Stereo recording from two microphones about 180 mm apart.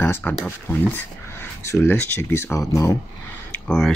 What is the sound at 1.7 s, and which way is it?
Speech, 10° left (ahead or behind).